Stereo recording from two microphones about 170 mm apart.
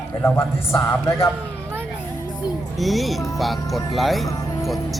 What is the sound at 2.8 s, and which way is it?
A man's voice, centre (ahead or behind).